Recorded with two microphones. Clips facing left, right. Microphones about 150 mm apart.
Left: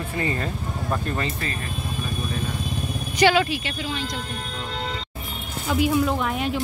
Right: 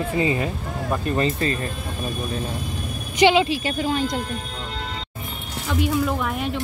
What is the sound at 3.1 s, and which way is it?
Speech, 20° right (ahead or behind).